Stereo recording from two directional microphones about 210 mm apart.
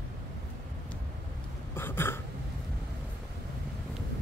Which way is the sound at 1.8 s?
10° left (ahead or behind).